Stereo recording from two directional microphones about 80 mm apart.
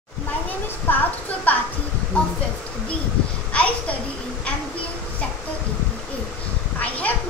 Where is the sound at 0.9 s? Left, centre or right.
Left.